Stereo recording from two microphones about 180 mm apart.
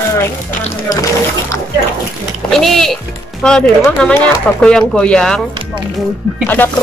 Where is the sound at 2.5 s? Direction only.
Centre (ahead or behind).